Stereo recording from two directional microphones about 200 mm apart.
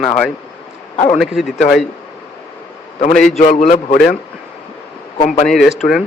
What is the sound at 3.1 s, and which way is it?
Speech, centre (ahead or behind).